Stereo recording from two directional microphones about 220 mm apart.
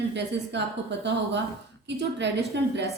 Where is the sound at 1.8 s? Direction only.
50° right (ahead or behind).